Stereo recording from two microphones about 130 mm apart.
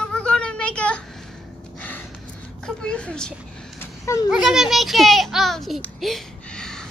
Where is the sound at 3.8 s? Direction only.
20° left (ahead or behind).